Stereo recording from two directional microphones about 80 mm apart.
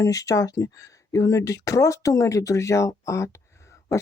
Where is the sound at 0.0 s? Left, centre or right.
Left.